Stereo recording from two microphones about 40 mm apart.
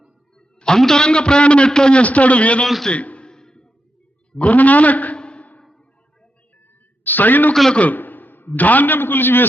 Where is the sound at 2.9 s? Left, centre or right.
Left.